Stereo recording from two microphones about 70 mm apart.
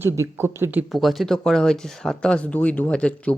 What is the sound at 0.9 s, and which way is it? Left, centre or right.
Speech, centre.